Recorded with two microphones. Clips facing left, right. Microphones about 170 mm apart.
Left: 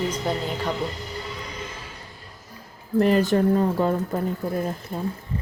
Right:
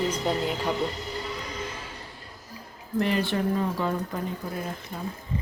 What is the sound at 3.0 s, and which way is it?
Speech, 40° left (ahead or behind).